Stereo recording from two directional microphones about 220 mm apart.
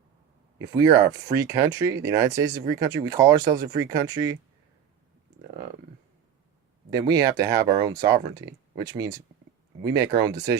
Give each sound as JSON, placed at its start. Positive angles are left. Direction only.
{"t": 0.6, "sound": "speech", "side_deg": -15}
{"t": 6.9, "sound": "speech", "side_deg": -15}